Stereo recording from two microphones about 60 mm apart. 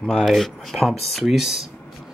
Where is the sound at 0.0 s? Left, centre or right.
Centre.